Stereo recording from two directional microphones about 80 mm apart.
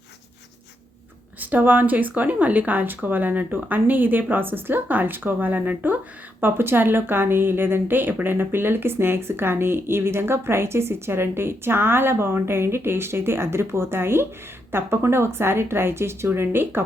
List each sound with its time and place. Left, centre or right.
1.4 s a woman's voice: right